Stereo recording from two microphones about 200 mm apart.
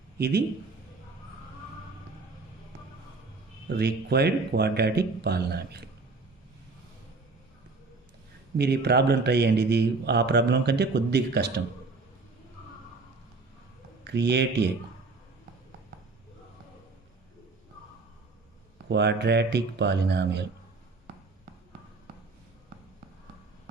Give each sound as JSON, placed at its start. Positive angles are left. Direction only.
{"t": 3.7, "sound": "speech", "side_deg": -55}
{"t": 8.5, "sound": "a man's voice", "side_deg": -55}
{"t": 14.0, "sound": "a man's voice", "side_deg": -60}
{"t": 18.9, "sound": "a man's voice", "side_deg": -55}